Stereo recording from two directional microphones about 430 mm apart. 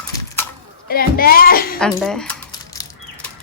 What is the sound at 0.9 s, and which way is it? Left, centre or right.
Speech, left.